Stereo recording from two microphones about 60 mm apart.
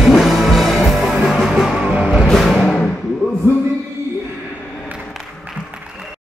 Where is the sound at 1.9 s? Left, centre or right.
Centre.